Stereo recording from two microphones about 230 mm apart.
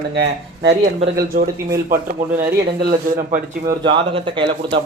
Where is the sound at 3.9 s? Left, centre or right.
Right.